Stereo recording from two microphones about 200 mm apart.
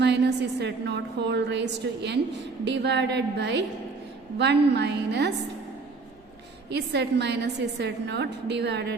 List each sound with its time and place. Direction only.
0.0 s a woman's voice: 60° right (ahead or behind)
6.7 s a woman's voice: 55° right (ahead or behind)